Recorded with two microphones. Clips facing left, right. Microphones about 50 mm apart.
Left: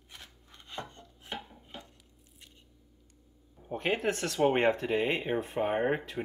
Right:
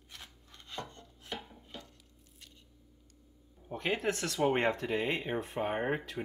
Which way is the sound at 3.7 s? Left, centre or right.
Left.